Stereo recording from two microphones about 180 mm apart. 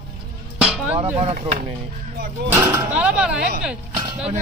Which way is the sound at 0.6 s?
5° right (ahead or behind).